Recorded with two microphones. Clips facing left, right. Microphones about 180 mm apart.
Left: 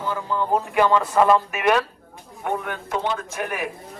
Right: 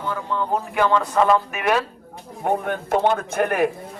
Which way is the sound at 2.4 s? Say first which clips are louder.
Right 4 dB; 40° right (ahead or behind).